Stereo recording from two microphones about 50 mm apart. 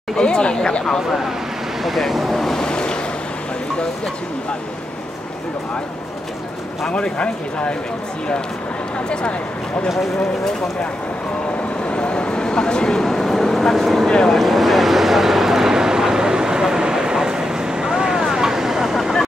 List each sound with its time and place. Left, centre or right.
0.2 s speech: centre
1.8 s vehicle: centre
6.9 s speech: left
11.9 s a sound: left; by 14.0 s centre
14.0 s speech: centre
14.3 s vehicle: centre